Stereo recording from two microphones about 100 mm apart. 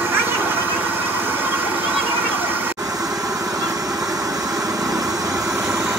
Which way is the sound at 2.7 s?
40° right (ahead or behind).